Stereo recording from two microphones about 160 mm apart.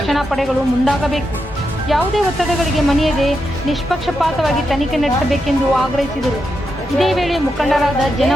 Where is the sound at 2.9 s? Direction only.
Centre (ahead or behind).